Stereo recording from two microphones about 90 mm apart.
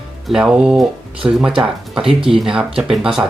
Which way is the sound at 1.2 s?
30° right (ahead or behind).